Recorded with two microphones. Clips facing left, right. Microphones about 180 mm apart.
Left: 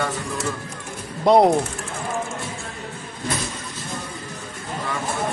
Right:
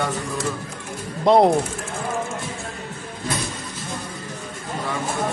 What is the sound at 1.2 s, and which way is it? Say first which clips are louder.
Speech: even; centre (ahead or behind).